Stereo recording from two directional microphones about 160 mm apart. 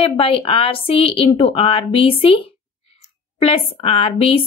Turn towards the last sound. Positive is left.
turn(degrees=35)  # may be behind; listen again after turning